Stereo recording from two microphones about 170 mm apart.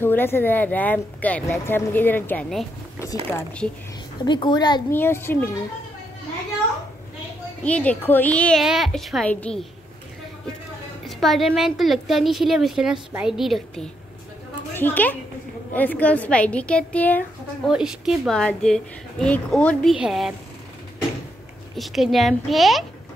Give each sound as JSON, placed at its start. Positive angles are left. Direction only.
{"t": 0.0, "sound": "speech", "side_deg": 10}
{"t": 4.2, "sound": "a child's voice", "side_deg": 25}
{"t": 4.9, "sound": "speech", "side_deg": 15}
{"t": 7.6, "sound": "speech", "side_deg": 10}
{"t": 11.1, "sound": "speech", "side_deg": 0}
{"t": 14.7, "sound": "a woman's voice", "side_deg": 10}
{"t": 17.6, "sound": "speech", "side_deg": -5}
{"t": 21.7, "sound": "speech", "side_deg": 0}